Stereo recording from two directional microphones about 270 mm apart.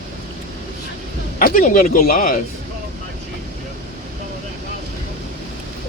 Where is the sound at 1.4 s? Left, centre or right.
Left.